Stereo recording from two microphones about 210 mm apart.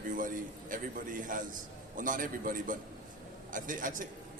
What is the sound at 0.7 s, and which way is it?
A man's voice, 40° right (ahead or behind).